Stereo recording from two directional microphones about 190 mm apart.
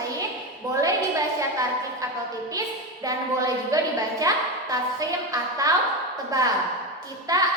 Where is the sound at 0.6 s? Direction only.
20° right (ahead or behind).